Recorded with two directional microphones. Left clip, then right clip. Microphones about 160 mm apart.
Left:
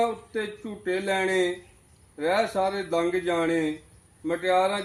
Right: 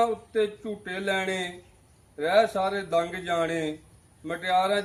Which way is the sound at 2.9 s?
30° right (ahead or behind).